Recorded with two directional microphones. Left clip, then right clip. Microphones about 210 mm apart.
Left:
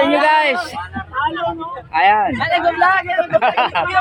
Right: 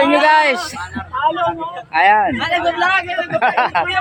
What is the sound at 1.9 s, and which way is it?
Speech, 5° right (ahead or behind).